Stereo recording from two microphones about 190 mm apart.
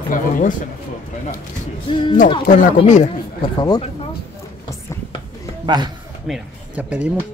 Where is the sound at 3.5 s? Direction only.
20° left (ahead or behind).